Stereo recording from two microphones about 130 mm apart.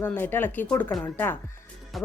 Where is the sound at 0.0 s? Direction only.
15° left (ahead or behind).